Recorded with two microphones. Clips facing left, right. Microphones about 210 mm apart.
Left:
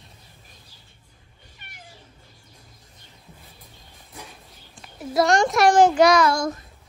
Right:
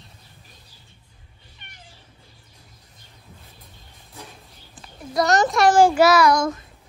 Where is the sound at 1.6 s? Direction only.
5° left (ahead or behind).